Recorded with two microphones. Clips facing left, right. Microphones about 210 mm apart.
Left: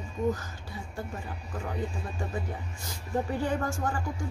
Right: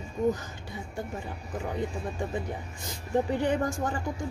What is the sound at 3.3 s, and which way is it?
Speech, 20° right (ahead or behind).